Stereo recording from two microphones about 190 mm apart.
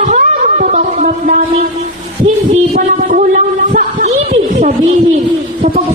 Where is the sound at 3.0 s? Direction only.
40° right (ahead or behind).